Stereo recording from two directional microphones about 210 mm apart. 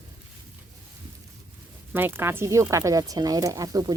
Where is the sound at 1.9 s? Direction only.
10° right (ahead or behind).